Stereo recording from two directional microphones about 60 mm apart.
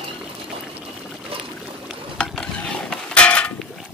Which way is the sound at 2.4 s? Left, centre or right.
Centre.